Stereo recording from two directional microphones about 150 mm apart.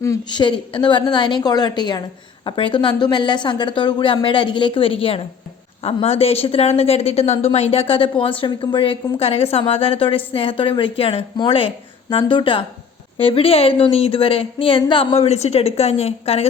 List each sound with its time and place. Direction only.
0.0 s a woman's voice: 25° left (ahead or behind); by 16.5 s 40° left (ahead or behind)